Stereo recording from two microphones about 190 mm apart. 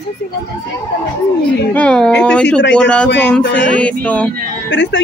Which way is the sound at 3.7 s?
5° left (ahead or behind).